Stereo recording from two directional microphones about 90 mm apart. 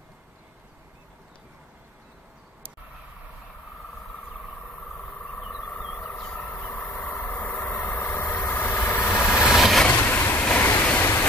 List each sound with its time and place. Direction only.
5.7 s vehicle: 15° left (ahead or behind)
8.3 s vehicle: 20° left (ahead or behind)
9.5 s vehicle: centre (ahead or behind)
9.8 s vehicle: 25° left (ahead or behind)